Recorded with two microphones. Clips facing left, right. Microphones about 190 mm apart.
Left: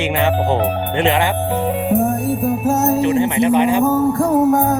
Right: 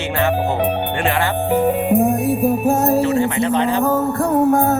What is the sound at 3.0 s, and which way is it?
Speech, 20° left (ahead or behind).